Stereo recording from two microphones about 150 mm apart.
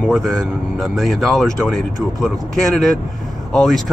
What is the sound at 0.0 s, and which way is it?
Speech, centre (ahead or behind).